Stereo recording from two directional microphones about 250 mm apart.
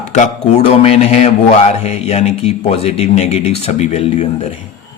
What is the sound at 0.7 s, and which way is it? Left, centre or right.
A man's voice, left.